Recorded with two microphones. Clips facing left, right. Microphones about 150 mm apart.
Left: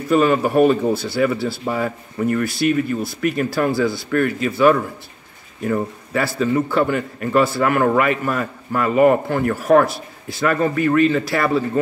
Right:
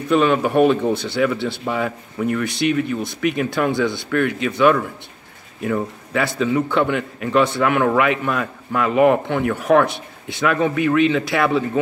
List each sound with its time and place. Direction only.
0.1 s a man's voice: 5° left (ahead or behind)